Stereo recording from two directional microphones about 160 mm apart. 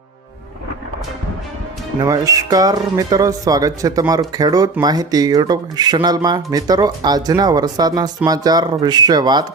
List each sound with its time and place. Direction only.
2.0 s speech: 20° right (ahead or behind)